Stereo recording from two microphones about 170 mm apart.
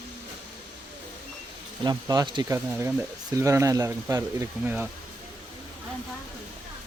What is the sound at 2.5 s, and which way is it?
Speech, 10° right (ahead or behind).